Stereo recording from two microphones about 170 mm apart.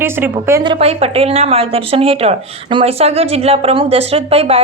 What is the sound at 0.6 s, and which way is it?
Speech, 30° right (ahead or behind).